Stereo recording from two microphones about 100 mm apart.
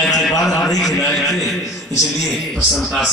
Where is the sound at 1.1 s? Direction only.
Centre (ahead or behind).